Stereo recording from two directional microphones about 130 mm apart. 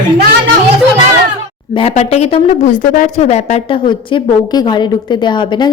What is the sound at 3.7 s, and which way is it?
A woman's voice, 40° left (ahead or behind).